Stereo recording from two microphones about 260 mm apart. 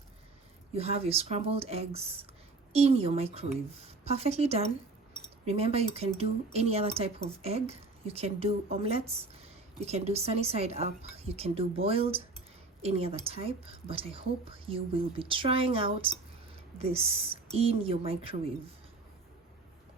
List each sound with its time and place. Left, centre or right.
0.7 s speech: right